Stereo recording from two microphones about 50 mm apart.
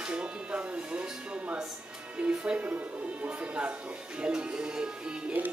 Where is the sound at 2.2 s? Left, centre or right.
Right.